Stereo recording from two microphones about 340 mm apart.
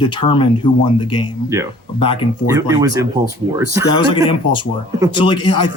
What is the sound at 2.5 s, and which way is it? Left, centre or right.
Speech, centre.